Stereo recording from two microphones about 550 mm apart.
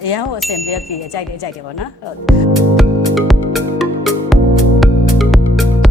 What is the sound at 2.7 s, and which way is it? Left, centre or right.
Music, centre.